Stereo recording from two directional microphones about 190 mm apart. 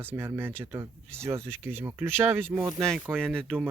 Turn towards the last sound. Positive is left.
turn(degrees=5)  # may be behind; listen again after turning